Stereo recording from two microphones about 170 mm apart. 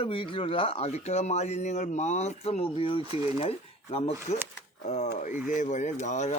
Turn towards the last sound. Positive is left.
turn(degrees=45)  # may be behind; listen again after turning